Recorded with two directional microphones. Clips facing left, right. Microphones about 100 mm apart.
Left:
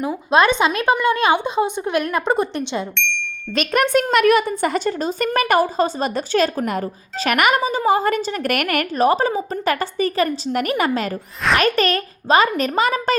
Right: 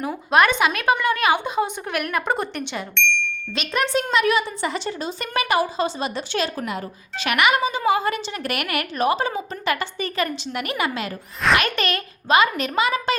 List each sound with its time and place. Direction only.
0.0 s a woman's voice: 20° left (ahead or behind)
2.9 s speech: centre (ahead or behind)
3.5 s a woman's voice: 50° left (ahead or behind)